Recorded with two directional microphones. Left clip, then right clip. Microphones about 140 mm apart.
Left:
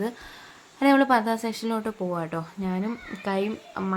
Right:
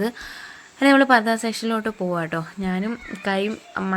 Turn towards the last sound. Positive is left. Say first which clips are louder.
# right 4 dB
turn(degrees=-20)  # may be behind; listen again after turning